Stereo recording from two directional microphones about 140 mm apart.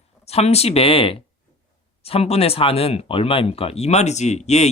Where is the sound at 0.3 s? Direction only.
50° left (ahead or behind).